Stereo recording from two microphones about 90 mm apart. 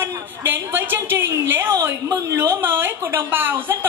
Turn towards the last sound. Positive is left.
turn(degrees=-25)  # may be behind; listen again after turning